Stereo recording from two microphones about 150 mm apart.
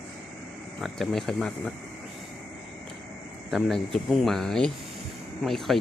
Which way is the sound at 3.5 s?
Centre (ahead or behind).